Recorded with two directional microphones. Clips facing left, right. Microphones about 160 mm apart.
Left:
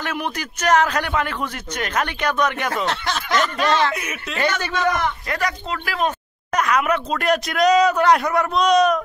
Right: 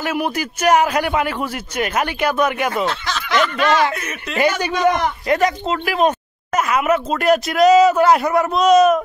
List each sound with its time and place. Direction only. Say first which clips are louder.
0.0 s a man's voice: right 5 dB; 10° right (ahead or behind)
2.9 s speech: even; 50° left (ahead or behind)
3.6 s a man's voice: right 3 dB; 10° right (ahead or behind)
3.9 s speech: right 1 dB; 10° left (ahead or behind)
4.4 s a man's voice: right 5 dB; 10° right (ahead or behind)
6.5 s speech: right 2 dB; 5° right (ahead or behind)